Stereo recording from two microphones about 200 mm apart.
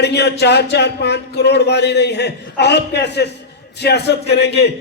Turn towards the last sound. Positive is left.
turn(degrees=55)  # may be behind; listen again after turning